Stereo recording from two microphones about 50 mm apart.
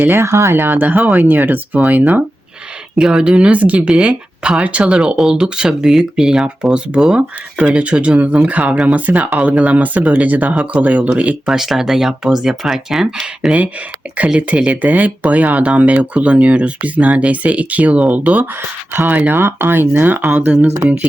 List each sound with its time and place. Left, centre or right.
0.2 s speech: right
0.5 s speech: right
0.8 s speech: right
2.9 s speech: centre
11.4 s speech: centre
14.4 s speech: right
19.4 s speech: right
20.3 s speech: right